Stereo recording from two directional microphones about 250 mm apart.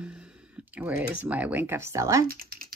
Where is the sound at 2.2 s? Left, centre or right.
Right.